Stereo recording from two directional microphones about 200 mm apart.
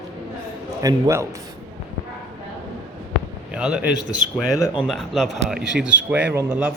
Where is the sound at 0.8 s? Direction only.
15° right (ahead or behind).